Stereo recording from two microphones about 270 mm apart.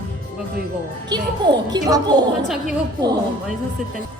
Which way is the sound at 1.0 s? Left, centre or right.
Centre.